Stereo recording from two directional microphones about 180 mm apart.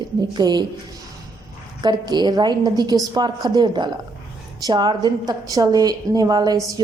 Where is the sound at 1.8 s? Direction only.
25° right (ahead or behind).